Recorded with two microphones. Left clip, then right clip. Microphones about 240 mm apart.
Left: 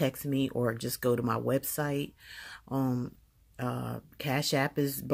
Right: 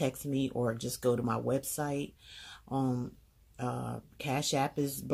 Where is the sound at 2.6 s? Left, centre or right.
Left.